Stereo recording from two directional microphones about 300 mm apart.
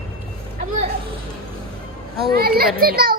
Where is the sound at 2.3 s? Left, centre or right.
Right.